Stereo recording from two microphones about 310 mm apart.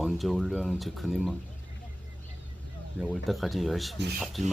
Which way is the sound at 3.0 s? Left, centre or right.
Centre.